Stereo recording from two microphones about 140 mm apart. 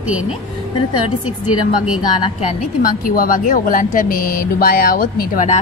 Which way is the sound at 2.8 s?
80° left.